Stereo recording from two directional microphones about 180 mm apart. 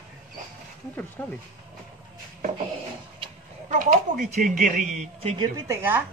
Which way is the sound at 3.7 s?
45° right (ahead or behind).